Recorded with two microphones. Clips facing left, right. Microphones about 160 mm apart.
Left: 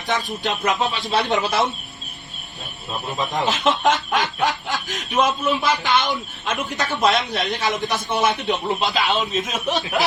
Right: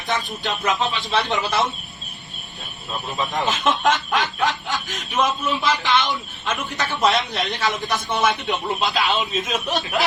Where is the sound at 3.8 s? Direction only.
Centre (ahead or behind).